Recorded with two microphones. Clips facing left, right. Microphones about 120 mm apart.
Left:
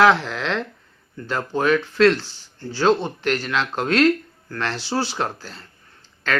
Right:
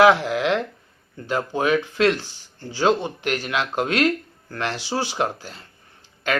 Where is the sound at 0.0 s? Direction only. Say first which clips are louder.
Right 1 dB; 15° right (ahead or behind).